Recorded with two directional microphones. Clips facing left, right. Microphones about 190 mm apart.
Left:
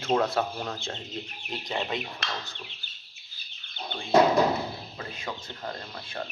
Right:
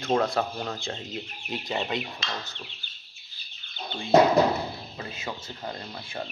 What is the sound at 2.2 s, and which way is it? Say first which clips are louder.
Speech: even; 65° left (ahead or behind).